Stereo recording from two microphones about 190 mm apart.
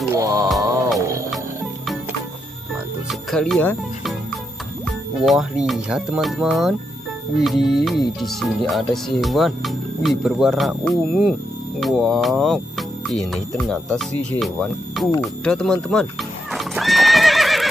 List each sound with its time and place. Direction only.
0.1 s music: 15° right (ahead or behind)
3.1 s music: centre (ahead or behind)
4.8 s speech: centre (ahead or behind)
15.1 s horse: 5° left (ahead or behind)